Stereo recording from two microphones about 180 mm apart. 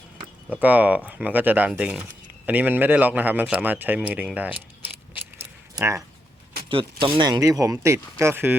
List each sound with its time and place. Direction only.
0.5 s a man's voice: 10° right (ahead or behind)
5.1 s a sound: 15° right (ahead or behind)
6.7 s a man's voice: 30° right (ahead or behind); by 8.5 s 10° right (ahead or behind)